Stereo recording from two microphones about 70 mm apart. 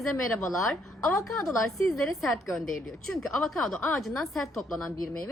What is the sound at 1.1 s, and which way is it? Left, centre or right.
Speech, left.